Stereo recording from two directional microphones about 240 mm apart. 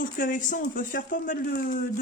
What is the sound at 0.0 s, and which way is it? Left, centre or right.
Speech, left.